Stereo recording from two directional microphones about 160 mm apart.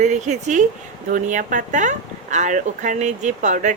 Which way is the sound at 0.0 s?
50° right (ahead or behind).